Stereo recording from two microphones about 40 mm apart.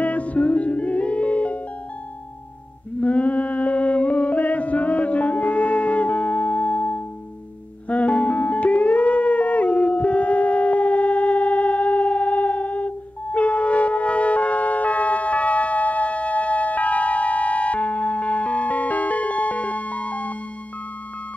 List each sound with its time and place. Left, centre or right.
0.0 s music: left
3.0 s music: left